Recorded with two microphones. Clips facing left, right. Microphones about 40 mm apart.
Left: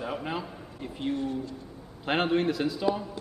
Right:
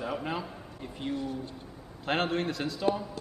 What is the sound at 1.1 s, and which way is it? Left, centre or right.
Speech, left.